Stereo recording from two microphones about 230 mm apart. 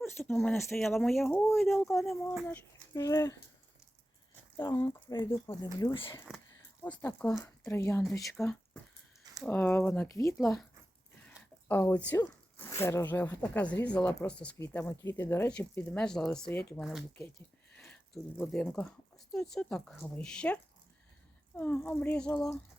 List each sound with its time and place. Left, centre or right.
0.0 s speech: centre
2.9 s speech: centre
4.5 s speech: centre
6.8 s speech: centre
10.3 s speech: centre
11.3 s a sound: centre
12.2 s speech: centre